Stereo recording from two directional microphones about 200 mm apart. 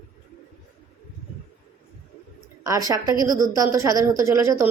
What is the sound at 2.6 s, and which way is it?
A woman's voice, 15° right (ahead or behind).